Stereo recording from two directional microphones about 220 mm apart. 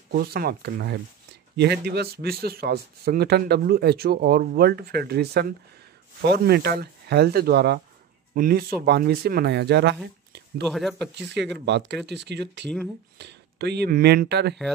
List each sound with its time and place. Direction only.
0.1 s speech: 45° right (ahead or behind)
10.7 s speech: centre (ahead or behind)
11.1 s speech: 50° right (ahead or behind)